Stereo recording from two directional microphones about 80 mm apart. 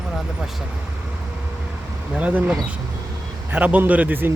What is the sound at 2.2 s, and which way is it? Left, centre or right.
A man's voice, centre.